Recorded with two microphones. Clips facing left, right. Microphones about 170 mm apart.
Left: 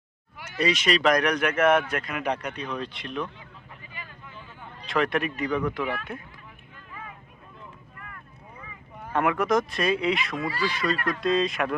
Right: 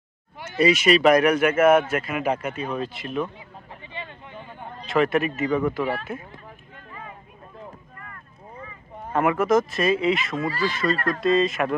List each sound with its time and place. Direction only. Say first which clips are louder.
0.3 s a sound: right 6 dB; 25° right (ahead or behind)
0.6 s speech: right 6 dB; 10° right (ahead or behind)
3.7 s vehicle: right 8 dB; 30° right (ahead or behind)
4.9 s speech: right 4 dB; centre (ahead or behind)
5.8 s speech: right 4 dB; 35° right (ahead or behind)
9.1 s speech: right 3 dB; centre (ahead or behind)